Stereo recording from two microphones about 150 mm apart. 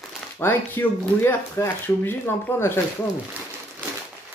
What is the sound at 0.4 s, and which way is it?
Speech, 15° left (ahead or behind).